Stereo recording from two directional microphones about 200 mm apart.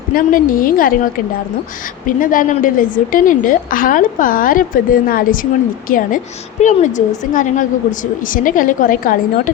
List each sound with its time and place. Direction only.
0.1 s a woman's voice: 45° left (ahead or behind)
2.0 s a woman's voice: 40° left (ahead or behind)